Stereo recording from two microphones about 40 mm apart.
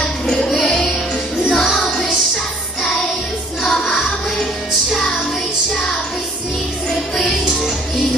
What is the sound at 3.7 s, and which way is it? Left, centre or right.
Music, centre.